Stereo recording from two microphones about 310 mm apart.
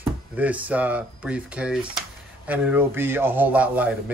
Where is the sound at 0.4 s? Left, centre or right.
Centre.